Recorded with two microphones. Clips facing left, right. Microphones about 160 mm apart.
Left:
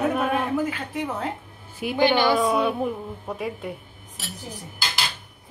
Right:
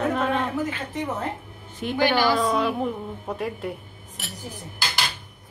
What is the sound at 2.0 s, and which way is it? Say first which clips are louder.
Speech: left 2 dB; 20° left (ahead or behind).